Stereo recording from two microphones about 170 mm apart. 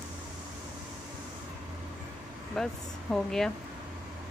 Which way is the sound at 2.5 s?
5° left (ahead or behind).